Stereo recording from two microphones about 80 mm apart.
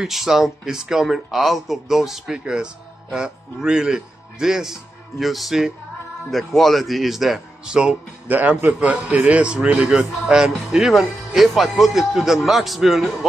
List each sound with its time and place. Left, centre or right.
0.0 s a man's voice: centre